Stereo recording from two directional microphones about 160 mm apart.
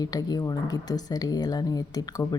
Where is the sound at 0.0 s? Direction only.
25° left (ahead or behind).